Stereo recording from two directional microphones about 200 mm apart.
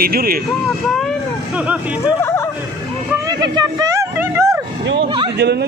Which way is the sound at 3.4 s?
15° right (ahead or behind).